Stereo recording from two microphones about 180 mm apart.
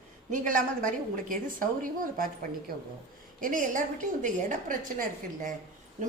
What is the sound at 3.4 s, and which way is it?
A woman's voice, 50° right (ahead or behind).